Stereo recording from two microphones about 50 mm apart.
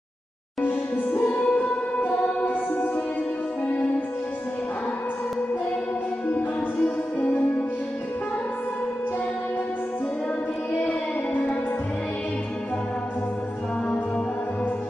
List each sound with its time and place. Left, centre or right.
0.6 s music: left
6.3 s music: left